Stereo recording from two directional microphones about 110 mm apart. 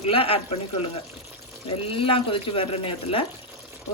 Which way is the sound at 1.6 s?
55° left (ahead or behind).